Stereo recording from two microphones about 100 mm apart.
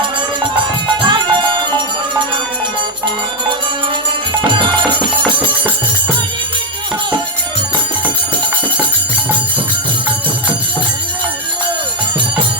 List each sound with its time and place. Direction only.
1.0 s music: 50° right (ahead or behind)
4.4 s music: 55° right (ahead or behind)